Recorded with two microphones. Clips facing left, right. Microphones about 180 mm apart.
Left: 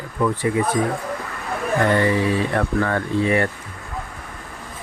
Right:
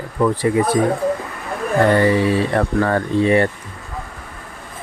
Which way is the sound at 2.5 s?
35° right (ahead or behind).